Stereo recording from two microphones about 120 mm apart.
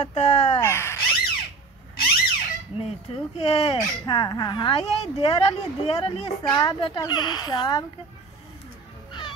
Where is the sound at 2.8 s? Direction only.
55° left (ahead or behind).